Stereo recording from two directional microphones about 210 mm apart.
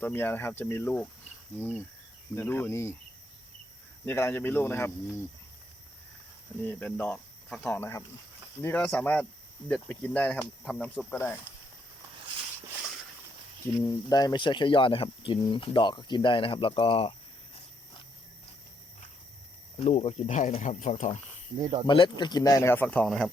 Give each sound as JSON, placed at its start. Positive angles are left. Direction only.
{"t": 0.0, "sound": "speech", "side_deg": 10}
{"t": 4.0, "sound": "speech", "side_deg": 10}
{"t": 6.6, "sound": "speech", "side_deg": 10}
{"t": 13.8, "sound": "speech", "side_deg": 20}
{"t": 19.8, "sound": "speech", "side_deg": 30}
{"t": 21.8, "sound": "speech", "side_deg": 20}